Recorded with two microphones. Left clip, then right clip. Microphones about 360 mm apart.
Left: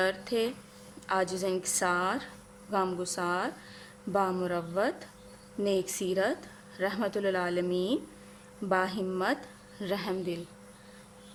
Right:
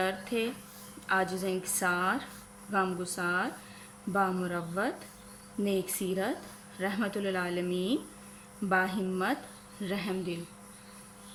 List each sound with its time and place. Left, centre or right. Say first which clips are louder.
0.0 s a woman's voice: left 2 dB; centre